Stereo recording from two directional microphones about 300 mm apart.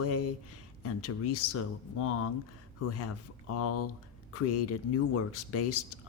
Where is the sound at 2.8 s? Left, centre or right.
Left.